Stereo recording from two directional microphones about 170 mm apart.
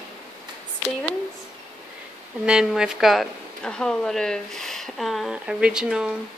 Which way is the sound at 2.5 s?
5° right (ahead or behind).